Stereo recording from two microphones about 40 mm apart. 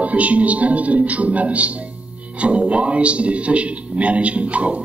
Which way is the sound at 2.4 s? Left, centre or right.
Right.